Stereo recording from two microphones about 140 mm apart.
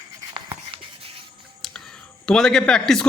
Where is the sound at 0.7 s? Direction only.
40° right (ahead or behind).